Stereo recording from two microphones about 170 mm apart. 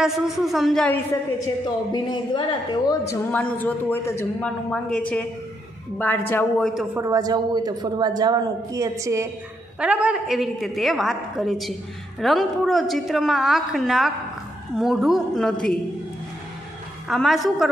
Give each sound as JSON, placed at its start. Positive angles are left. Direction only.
{"t": 0.0, "sound": "a woman's voice", "side_deg": 0}
{"t": 1.9, "sound": "a woman's voice", "side_deg": 25}
{"t": 3.1, "sound": "a man's voice", "side_deg": 10}
{"t": 6.9, "sound": "a woman's voice", "side_deg": -20}
{"t": 9.8, "sound": "a woman's voice", "side_deg": -5}
{"t": 17.1, "sound": "a woman's voice", "side_deg": 0}